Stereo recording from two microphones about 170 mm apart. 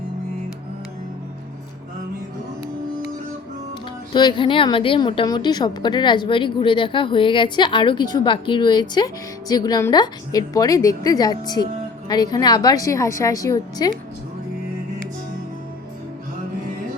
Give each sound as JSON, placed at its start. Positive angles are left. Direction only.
{"t": 4.1, "sound": "a woman's voice", "side_deg": 25}